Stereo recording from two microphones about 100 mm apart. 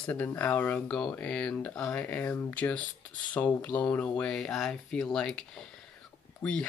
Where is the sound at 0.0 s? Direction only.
15° left (ahead or behind).